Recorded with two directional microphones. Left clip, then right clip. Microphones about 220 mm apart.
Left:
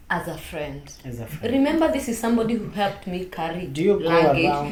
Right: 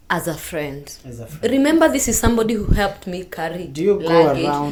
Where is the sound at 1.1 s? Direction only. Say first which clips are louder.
Even; centre (ahead or behind).